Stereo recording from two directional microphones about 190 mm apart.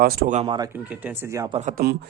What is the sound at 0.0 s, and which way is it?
Speech, 55° right (ahead or behind).